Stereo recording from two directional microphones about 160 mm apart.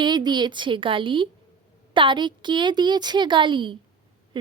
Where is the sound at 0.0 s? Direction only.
25° right (ahead or behind).